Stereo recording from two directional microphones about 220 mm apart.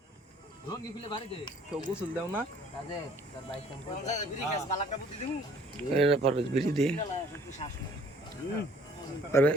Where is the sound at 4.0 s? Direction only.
30° left (ahead or behind).